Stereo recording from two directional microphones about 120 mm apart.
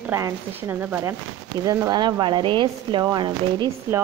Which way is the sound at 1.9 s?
40° right (ahead or behind).